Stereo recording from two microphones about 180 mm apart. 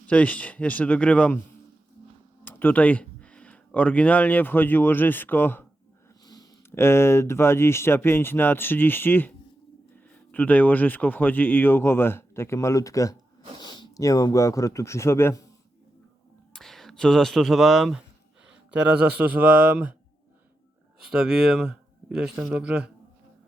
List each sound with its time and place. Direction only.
0.1 s speech: 5° left (ahead or behind)
2.4 s speech: 10° left (ahead or behind)
10.3 s speech: 10° left (ahead or behind)
16.5 s speech: centre (ahead or behind)
21.0 s a man's voice: 5° right (ahead or behind)